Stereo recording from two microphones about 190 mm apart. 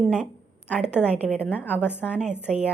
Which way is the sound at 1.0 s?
10° left (ahead or behind).